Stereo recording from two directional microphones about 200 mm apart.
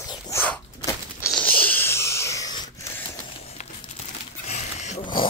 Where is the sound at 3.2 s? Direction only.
30° left (ahead or behind).